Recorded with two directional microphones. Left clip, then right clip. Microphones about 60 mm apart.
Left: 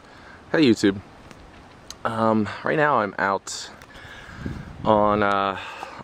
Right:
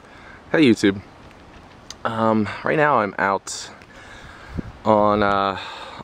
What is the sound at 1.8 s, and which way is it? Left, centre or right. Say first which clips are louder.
Speech: right 2 dB; centre.